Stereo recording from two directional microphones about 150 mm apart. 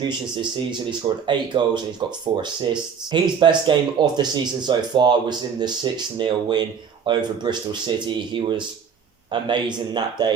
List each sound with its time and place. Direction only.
0.0 s speech: 30° right (ahead or behind)